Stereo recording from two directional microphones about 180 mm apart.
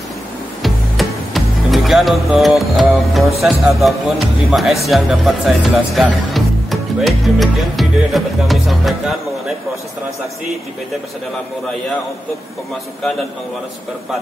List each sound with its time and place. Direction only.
0.6 s speech: centre (ahead or behind)